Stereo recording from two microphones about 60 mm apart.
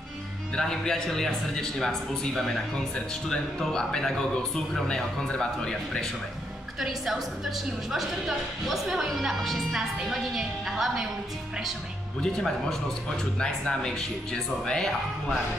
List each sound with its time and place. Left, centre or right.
0.6 s speech: centre
6.8 s a woman's voice: centre
12.2 s speech: centre